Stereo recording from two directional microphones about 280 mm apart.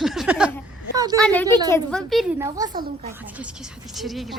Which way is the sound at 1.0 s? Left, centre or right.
Centre.